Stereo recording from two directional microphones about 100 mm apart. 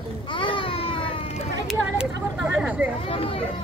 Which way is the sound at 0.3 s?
60° left (ahead or behind).